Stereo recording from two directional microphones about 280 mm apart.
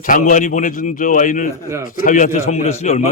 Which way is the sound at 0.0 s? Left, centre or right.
Left.